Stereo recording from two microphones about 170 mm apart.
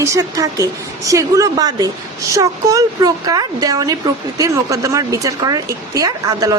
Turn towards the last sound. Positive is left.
turn(degrees=-20)  # may be behind; listen again after turning